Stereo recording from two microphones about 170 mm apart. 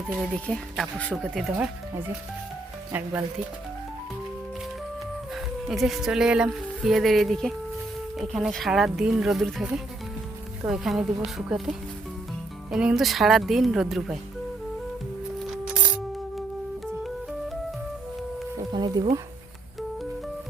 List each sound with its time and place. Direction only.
0.4 s speech: 5° left (ahead or behind)
2.9 s speech: 10° right (ahead or behind)
5.3 s speech: centre (ahead or behind)
10.7 s speech: centre (ahead or behind)
15.4 s music: 5° right (ahead or behind)
18.7 s a sound: 25° right (ahead or behind)